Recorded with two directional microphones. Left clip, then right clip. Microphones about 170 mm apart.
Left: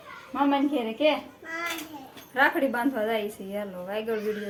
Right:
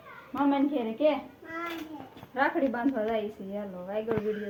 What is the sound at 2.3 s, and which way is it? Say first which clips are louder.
Speech: left 4 dB; 15° left (ahead or behind).